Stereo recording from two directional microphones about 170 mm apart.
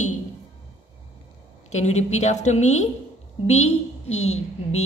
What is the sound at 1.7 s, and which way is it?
A woman's voice, 40° left (ahead or behind).